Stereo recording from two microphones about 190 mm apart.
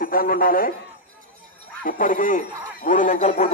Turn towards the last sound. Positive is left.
turn(degrees=40)  # may be behind; listen again after turning